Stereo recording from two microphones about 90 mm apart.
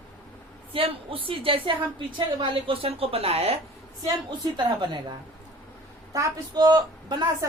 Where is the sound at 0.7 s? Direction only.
85° right.